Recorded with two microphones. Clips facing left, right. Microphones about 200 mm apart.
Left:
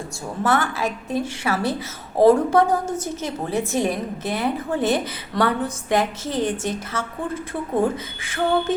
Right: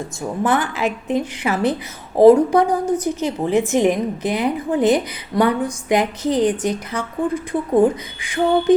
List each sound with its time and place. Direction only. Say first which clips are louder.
0.2 s a woman's voice: right 2 dB; 15° right (ahead or behind)